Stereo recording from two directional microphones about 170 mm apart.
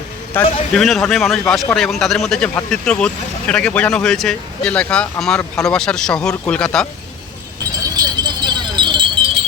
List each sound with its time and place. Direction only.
0.4 s speech: 10° left (ahead or behind)
7.9 s keys jangling: 25° right (ahead or behind)